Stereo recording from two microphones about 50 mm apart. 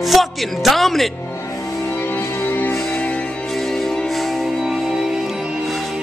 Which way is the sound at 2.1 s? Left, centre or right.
Left.